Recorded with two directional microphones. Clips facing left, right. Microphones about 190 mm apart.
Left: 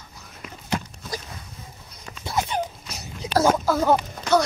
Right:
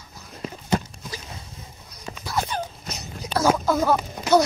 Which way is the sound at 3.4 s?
5° left (ahead or behind).